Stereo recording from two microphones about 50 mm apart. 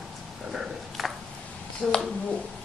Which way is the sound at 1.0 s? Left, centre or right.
Centre.